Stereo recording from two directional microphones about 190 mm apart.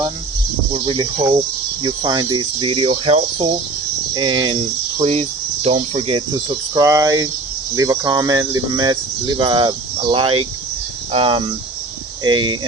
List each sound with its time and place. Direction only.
0.7 s speech: 25° right (ahead or behind)